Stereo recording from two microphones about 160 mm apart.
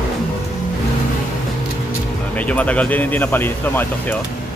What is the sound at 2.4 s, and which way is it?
Speech, 10° left (ahead or behind).